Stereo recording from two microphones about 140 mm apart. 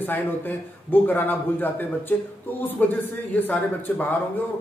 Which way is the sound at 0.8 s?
15° left (ahead or behind).